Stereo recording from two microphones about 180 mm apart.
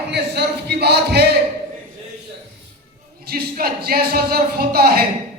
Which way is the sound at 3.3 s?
55° right (ahead or behind).